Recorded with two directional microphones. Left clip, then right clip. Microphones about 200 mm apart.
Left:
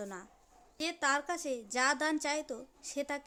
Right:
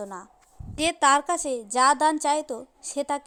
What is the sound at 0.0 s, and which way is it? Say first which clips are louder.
Speech: right 8 dB; 10° left (ahead or behind).